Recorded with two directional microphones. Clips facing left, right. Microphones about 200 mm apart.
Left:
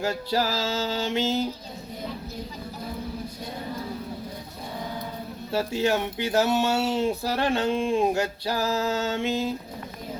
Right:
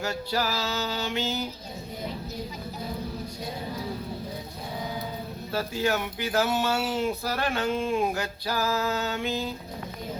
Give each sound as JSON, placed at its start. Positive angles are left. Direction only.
{"t": 0.0, "sound": "speech", "side_deg": 30}
{"t": 5.5, "sound": "speech", "side_deg": 25}